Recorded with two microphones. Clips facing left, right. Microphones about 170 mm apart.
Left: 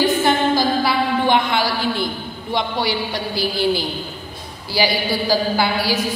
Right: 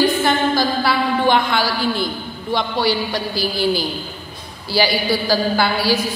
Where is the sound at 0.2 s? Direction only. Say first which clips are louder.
Even; 20° left (ahead or behind).